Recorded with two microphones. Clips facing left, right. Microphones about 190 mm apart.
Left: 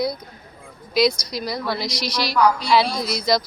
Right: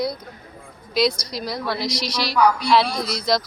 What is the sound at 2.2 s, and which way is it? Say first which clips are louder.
Speech: even; centre (ahead or behind).